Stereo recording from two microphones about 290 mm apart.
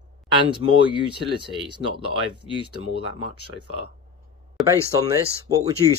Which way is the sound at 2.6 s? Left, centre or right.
Centre.